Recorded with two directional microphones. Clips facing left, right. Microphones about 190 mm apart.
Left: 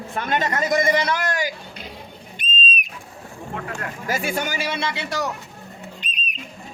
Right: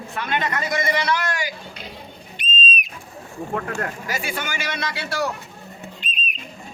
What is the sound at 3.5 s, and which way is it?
Speech, 45° right (ahead or behind).